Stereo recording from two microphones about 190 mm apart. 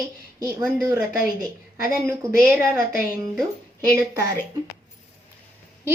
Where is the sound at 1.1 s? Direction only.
50° left (ahead or behind).